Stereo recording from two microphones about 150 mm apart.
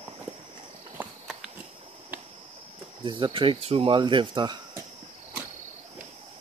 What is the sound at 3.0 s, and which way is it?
Speech, 35° right (ahead or behind).